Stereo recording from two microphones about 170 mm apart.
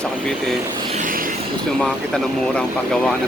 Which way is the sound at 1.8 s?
5° left (ahead or behind).